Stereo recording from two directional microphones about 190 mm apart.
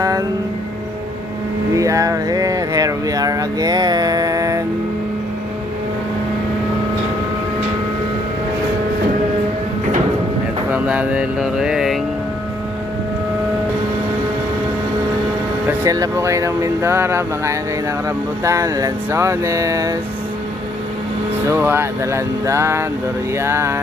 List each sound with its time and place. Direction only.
0.0 s music: 15° right (ahead or behind)
1.7 s a sound: 15° right (ahead or behind)
10.7 s music: 5° right (ahead or behind)
15.8 s speech: 15° right (ahead or behind)
21.5 s speech: 10° right (ahead or behind)